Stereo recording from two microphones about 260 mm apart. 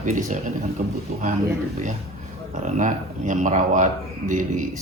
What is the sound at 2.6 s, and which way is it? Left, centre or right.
A man's voice, right.